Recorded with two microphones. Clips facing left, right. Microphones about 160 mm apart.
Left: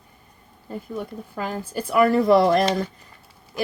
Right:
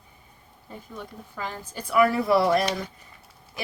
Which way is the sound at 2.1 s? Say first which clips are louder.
Left 5 dB; 5° right (ahead or behind).